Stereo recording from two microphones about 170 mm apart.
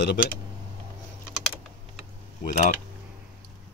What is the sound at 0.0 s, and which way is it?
Speech, 70° left (ahead or behind).